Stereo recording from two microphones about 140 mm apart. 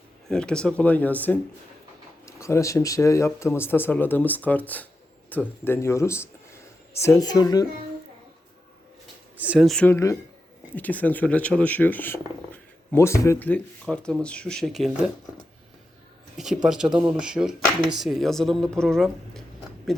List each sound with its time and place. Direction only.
0.3 s speech: 5° left (ahead or behind); by 7.7 s 25° left (ahead or behind)
9.4 s speech: 10° right (ahead or behind)
9.6 s speech: 5° left (ahead or behind)
9.9 s speech: 20° left (ahead or behind)
10.8 s speech: 10° left (ahead or behind)
16.6 s speech: 5° right (ahead or behind)